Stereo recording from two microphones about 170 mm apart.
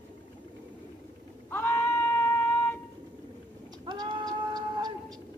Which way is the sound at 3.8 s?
25° right (ahead or behind).